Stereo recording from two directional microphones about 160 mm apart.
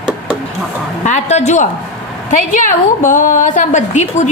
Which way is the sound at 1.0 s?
45° left (ahead or behind).